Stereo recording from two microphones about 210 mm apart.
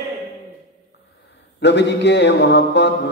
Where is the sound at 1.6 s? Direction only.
55° left (ahead or behind).